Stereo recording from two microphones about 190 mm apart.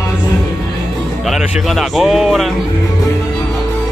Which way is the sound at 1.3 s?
Centre (ahead or behind).